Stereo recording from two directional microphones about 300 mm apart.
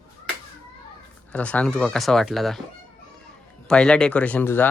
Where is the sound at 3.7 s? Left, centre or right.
Centre.